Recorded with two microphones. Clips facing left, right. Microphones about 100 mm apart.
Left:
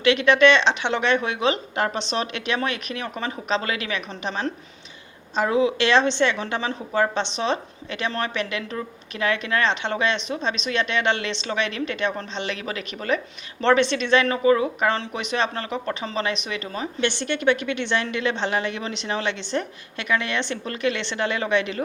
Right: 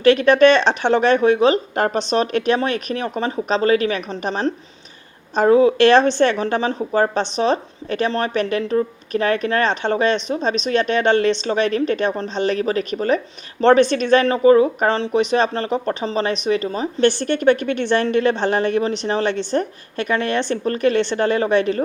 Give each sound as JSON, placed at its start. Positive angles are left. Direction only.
{"t": 0.0, "sound": "speech", "side_deg": -45}